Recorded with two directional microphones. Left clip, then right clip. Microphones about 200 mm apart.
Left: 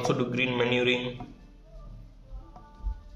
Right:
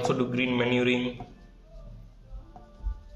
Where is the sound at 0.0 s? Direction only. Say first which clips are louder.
Even; 10° left (ahead or behind).